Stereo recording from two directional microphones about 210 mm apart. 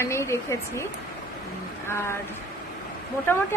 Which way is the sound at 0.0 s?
10° left (ahead or behind).